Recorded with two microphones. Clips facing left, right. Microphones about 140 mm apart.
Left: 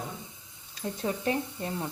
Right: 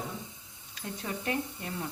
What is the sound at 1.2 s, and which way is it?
Speech, 30° left (ahead or behind).